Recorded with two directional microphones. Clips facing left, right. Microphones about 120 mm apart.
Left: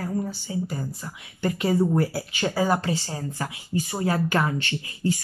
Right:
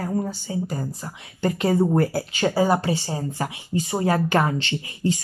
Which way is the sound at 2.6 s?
15° right (ahead or behind).